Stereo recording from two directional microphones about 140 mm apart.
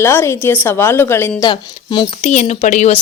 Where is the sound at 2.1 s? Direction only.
55° left (ahead or behind).